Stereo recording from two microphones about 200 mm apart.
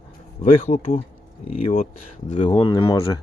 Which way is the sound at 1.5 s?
35° left (ahead or behind).